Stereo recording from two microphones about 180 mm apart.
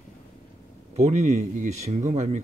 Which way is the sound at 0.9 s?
40° right (ahead or behind).